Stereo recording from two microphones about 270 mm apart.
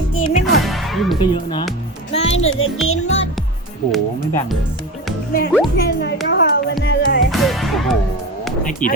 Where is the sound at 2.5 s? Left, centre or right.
Left.